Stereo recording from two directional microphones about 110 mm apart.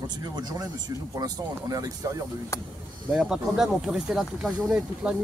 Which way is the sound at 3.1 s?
5° right (ahead or behind).